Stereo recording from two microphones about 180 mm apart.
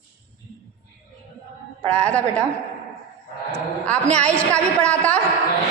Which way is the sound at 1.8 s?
5° left (ahead or behind).